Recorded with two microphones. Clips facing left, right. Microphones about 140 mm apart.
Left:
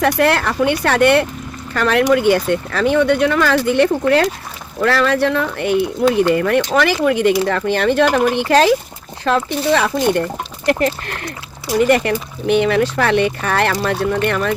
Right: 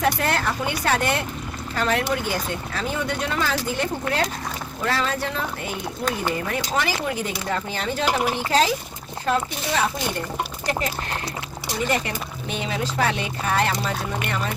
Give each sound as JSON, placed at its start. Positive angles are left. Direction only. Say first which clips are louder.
{"t": 0.0, "sound": "speech", "louder": "left 7 dB", "side_deg": 70}